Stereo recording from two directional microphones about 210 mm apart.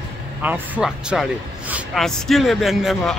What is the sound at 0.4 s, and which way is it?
Speech, 5° right (ahead or behind).